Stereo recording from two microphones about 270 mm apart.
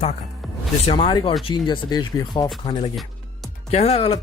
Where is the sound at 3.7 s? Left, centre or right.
Left.